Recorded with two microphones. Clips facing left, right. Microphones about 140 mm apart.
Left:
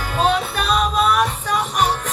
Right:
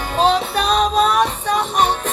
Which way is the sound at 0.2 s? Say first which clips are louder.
Right 3 dB; 30° right (ahead or behind).